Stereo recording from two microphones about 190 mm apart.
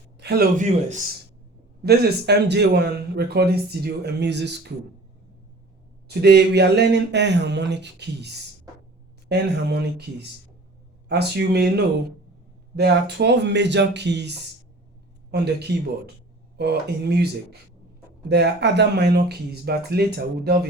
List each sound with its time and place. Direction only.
0.2 s a sound: 60° right (ahead or behind)
0.5 s speech: 40° right (ahead or behind)
1.8 s a man's voice: 60° right (ahead or behind)
6.1 s a man's voice: 60° right (ahead or behind)
9.3 s a man's voice: 60° right (ahead or behind)
12.7 s a man's voice: 60° right (ahead or behind)